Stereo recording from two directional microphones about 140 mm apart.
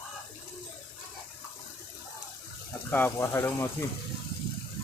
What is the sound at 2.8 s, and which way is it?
Speech, 15° left (ahead or behind).